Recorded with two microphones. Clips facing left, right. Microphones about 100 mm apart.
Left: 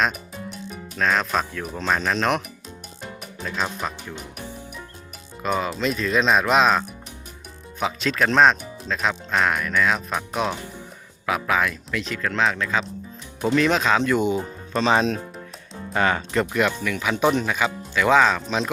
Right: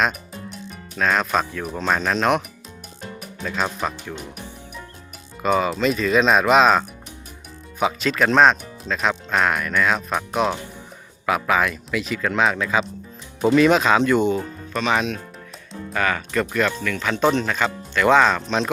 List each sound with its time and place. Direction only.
0.0 s music: centre (ahead or behind)
0.9 s speech: centre (ahead or behind)
5.4 s speech: centre (ahead or behind)
14.7 s speech: 30° left (ahead or behind); by 18.7 s 5° left (ahead or behind)